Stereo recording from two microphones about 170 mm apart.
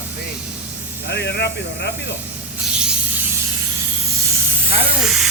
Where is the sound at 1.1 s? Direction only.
85° left.